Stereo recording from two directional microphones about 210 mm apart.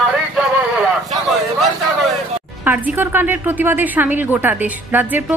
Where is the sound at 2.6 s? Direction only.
10° right (ahead or behind).